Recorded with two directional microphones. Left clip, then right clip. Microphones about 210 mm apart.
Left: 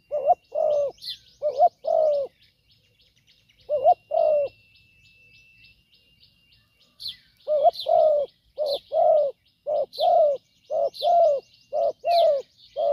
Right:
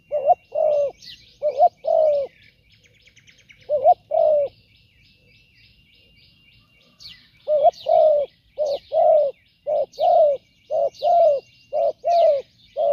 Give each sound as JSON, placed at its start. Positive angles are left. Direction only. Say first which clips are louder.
{"t": 0.1, "sound": "bird", "louder": "right 3 dB", "side_deg": 30}
{"t": 3.7, "sound": "bird", "louder": "right 3 dB", "side_deg": 25}
{"t": 7.4, "sound": "bird", "louder": "right 3 dB", "side_deg": 25}